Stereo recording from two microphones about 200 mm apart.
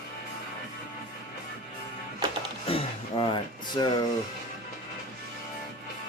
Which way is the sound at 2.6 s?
30° left (ahead or behind).